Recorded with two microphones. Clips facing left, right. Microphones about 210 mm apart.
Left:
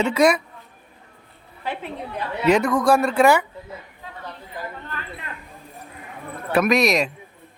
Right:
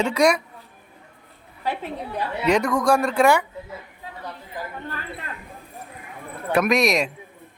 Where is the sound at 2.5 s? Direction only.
5° left (ahead or behind).